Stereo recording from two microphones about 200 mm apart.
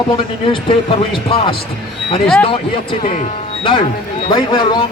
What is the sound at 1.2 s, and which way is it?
A man's voice, 25° left (ahead or behind).